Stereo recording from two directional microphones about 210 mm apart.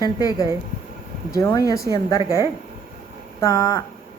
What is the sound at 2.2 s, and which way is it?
Speech, 15° right (ahead or behind).